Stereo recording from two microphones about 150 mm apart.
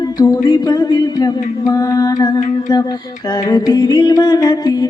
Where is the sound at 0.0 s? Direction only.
25° left (ahead or behind).